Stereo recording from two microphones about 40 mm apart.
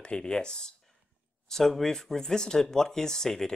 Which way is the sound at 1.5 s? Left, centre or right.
Centre.